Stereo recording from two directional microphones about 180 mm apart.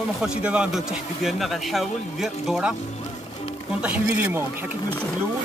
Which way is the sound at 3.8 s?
5° right (ahead or behind).